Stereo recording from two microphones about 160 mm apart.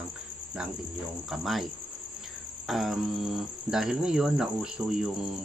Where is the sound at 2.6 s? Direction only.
Centre (ahead or behind).